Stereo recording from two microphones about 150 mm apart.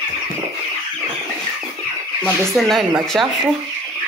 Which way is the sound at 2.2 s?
Centre (ahead or behind).